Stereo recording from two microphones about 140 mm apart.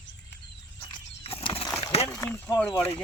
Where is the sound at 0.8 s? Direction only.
45° left (ahead or behind).